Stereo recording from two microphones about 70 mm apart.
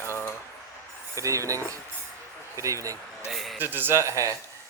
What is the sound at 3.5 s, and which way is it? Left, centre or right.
Speech, right.